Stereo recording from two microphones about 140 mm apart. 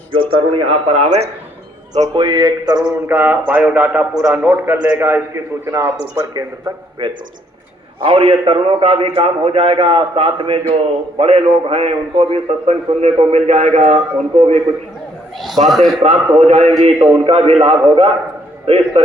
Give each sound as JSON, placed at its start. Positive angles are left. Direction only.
{"t": 0.1, "sound": "a man's voice", "side_deg": -40}
{"t": 2.1, "sound": "a sound", "side_deg": -35}
{"t": 3.1, "sound": "a man's voice", "side_deg": -15}
{"t": 7.0, "sound": "a sound", "side_deg": -35}
{"t": 8.0, "sound": "a man's voice", "side_deg": -40}
{"t": 15.6, "sound": "a man's voice", "side_deg": 0}
{"t": 16.0, "sound": "a man's voice", "side_deg": -50}